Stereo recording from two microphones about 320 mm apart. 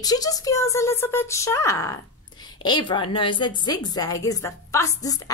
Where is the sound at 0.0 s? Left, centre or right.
Centre.